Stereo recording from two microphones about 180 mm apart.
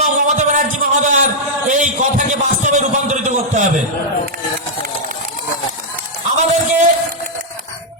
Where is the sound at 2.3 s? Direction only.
40° right (ahead or behind).